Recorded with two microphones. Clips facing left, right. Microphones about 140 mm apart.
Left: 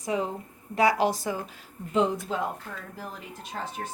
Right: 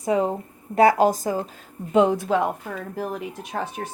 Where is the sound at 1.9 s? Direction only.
65° right (ahead or behind).